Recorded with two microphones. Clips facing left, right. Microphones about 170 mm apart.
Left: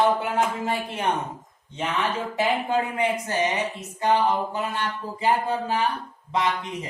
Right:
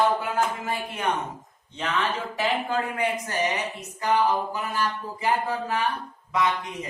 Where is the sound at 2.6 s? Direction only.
25° left (ahead or behind).